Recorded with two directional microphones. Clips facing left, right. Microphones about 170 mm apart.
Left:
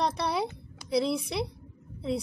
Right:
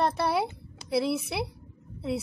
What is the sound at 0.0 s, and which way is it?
A woman's voice, 5° right (ahead or behind).